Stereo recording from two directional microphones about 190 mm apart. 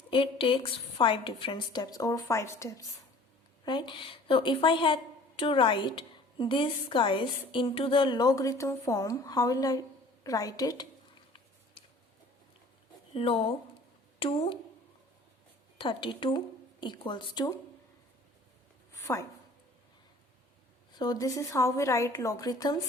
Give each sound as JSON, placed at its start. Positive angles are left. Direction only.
{"t": 0.1, "sound": "a woman's voice", "side_deg": 30}
{"t": 13.1, "sound": "a woman's voice", "side_deg": 30}
{"t": 15.8, "sound": "a woman's voice", "side_deg": 25}
{"t": 19.1, "sound": "a woman's voice", "side_deg": 15}
{"t": 21.0, "sound": "a woman's voice", "side_deg": 20}